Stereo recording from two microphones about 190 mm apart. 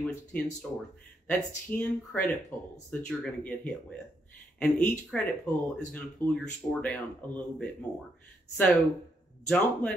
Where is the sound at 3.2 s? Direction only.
5° left (ahead or behind).